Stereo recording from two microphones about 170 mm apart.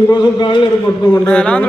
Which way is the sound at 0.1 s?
25° left (ahead or behind).